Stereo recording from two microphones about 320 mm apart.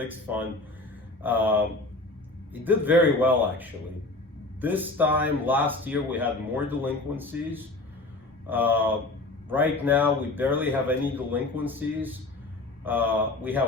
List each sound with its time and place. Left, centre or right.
0.0 s speech: centre